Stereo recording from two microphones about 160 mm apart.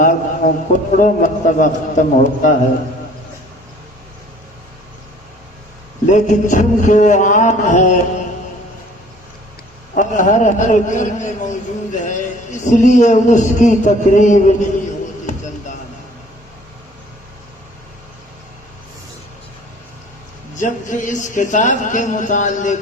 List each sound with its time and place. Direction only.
0.0 s a man's voice: 55° left (ahead or behind)
6.1 s a man's voice: 50° left (ahead or behind)
9.9 s a man's voice: 55° left (ahead or behind)
20.6 s a man's voice: 50° left (ahead or behind)